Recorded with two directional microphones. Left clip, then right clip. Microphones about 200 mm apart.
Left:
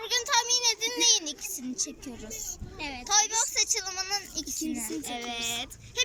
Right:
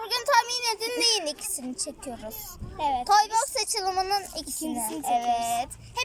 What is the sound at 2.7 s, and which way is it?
Speech, 15° right (ahead or behind).